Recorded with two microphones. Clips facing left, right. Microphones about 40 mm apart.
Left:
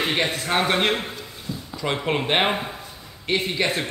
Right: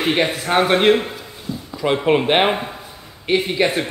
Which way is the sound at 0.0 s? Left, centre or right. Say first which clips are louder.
Right 5 dB; centre.